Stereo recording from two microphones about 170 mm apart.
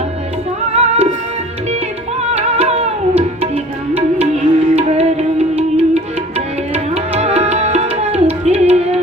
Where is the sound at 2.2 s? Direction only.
40° right (ahead or behind).